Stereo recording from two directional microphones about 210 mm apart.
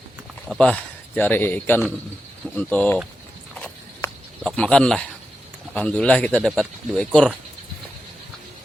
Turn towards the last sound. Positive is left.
turn(degrees=5)  # may be behind; listen again after turning